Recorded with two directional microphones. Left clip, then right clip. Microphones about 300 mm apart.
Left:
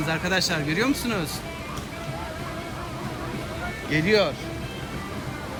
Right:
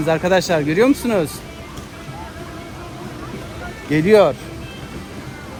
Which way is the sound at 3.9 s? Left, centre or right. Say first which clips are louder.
Right 9 dB; centre.